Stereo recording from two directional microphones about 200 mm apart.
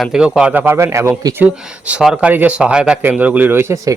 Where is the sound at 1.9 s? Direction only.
5° right (ahead or behind).